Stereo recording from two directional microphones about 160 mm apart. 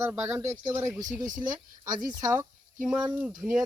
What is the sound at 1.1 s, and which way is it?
Speech, 55° right (ahead or behind).